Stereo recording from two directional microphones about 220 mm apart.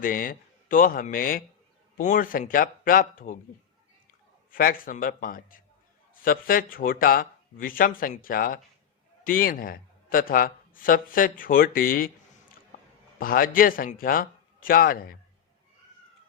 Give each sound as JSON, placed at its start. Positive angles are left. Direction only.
{"t": 0.0, "sound": "speech", "side_deg": 40}
{"t": 4.5, "sound": "speech", "side_deg": 40}